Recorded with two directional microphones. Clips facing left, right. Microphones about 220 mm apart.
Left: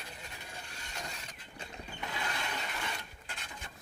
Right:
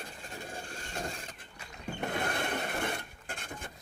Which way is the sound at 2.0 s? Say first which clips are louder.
Right 7 dB; 55° right (ahead or behind).